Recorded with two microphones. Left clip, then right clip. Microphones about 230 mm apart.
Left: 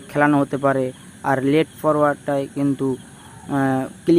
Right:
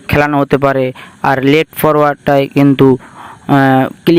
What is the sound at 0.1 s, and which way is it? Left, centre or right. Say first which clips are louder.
Speech: right 7 dB; right.